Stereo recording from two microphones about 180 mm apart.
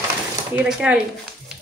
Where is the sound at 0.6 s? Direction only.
5° right (ahead or behind).